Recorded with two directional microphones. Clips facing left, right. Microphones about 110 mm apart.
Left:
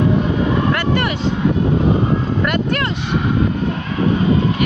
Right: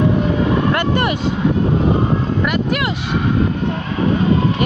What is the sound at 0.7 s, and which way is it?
Vehicle, 20° right (ahead or behind).